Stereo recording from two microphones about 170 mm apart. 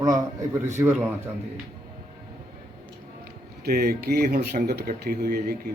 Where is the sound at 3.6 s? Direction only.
70° right (ahead or behind).